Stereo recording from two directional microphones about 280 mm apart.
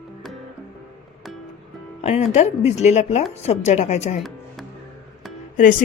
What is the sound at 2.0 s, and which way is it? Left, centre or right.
Speech, left.